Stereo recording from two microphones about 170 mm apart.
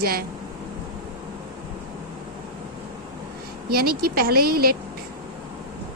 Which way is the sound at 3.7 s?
60° right (ahead or behind).